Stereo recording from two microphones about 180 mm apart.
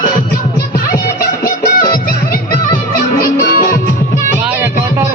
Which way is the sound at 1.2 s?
55° left (ahead or behind).